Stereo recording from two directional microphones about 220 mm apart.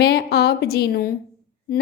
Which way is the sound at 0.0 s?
45° left (ahead or behind).